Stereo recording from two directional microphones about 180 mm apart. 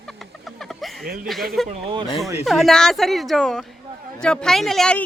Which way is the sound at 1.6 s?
Centre (ahead or behind).